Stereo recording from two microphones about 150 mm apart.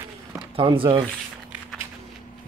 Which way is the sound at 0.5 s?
35° right (ahead or behind).